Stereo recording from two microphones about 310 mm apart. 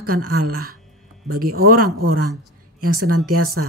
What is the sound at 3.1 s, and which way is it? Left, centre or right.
Speech, right.